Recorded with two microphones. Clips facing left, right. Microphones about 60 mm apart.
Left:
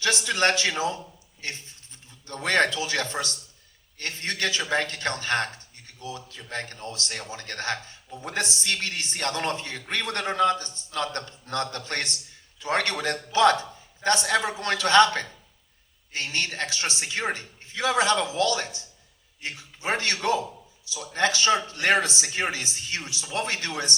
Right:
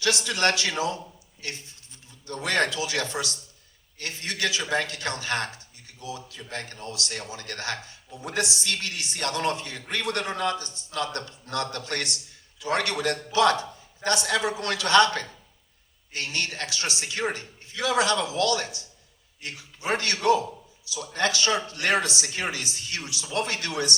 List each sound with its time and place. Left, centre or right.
0.0 s a man's voice: left